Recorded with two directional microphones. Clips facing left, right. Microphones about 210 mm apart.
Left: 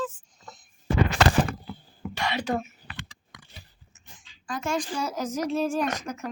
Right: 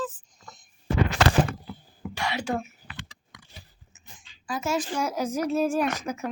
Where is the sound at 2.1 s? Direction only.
10° right (ahead or behind).